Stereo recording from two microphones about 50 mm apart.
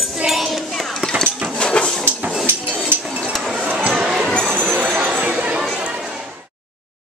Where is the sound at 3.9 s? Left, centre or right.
Centre.